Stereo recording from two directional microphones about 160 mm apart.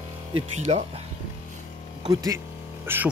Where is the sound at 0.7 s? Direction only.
40° right (ahead or behind).